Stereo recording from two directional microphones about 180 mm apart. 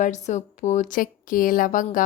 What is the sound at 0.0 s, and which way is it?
Speech, 40° left (ahead or behind).